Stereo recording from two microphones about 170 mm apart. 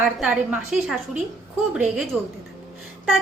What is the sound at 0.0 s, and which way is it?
A woman's voice, 5° right (ahead or behind).